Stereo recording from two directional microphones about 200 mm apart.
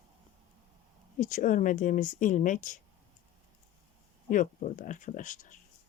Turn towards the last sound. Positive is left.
turn(degrees=40)  # may be behind; listen again after turning